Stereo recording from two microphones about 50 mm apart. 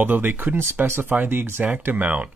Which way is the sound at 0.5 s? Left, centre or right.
Right.